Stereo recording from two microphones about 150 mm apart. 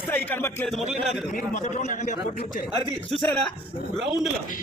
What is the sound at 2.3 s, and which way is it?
Speech, 70° left (ahead or behind).